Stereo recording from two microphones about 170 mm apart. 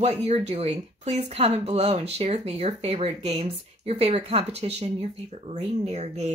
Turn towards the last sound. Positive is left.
turn(degrees=-40)  # may be behind; listen again after turning